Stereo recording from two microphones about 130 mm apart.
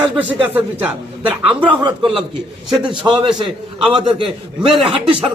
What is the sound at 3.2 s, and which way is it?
A man's voice, 35° right (ahead or behind).